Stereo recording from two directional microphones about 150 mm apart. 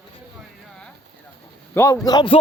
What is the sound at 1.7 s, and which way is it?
Speech, 15° left (ahead or behind).